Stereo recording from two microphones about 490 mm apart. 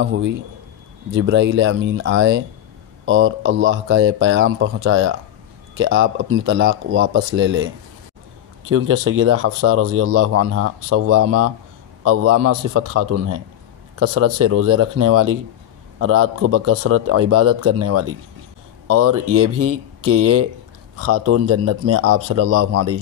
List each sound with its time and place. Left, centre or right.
0.0 s speech: right